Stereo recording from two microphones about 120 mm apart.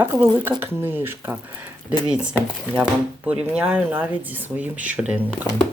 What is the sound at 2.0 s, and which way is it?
Speech, 10° right (ahead or behind).